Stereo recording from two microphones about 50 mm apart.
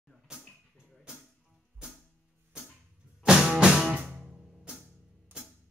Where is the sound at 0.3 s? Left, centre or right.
Centre.